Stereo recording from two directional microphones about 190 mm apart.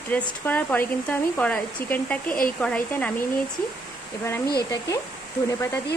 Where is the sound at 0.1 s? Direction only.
10° left (ahead or behind).